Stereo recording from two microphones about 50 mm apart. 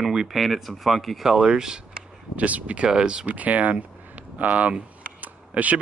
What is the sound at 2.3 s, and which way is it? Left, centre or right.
Speech, right.